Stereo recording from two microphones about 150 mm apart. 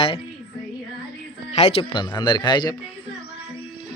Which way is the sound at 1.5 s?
45° left (ahead or behind).